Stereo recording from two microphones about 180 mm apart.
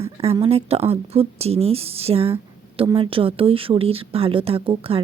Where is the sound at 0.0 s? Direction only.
35° right (ahead or behind).